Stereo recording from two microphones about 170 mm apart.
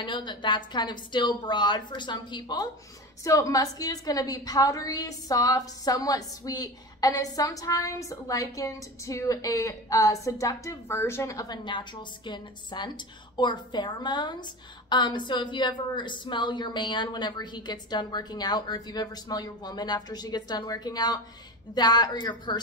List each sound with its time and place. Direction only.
0.0 s a woman's voice: 25° left (ahead or behind)